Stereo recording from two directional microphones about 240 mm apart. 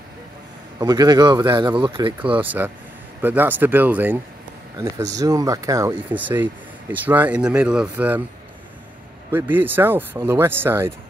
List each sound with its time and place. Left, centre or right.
0.7 s speech: centre
2.3 s speech: centre
9.3 s speech: centre